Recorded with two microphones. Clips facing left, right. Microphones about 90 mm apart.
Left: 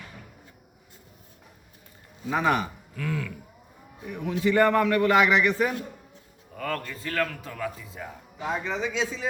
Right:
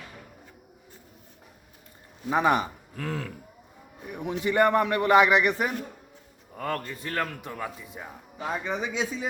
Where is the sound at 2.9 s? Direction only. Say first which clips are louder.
Left 2 dB; 35° right (ahead or behind).